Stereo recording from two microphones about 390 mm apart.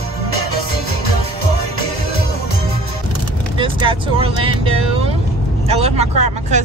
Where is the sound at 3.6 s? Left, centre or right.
Centre.